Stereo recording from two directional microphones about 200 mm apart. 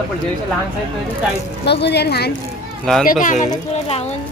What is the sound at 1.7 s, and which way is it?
Speech, 55° left (ahead or behind).